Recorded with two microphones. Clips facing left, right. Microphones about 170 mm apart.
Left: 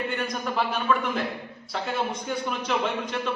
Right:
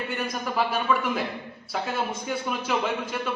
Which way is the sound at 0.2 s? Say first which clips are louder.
Even; 5° right (ahead or behind).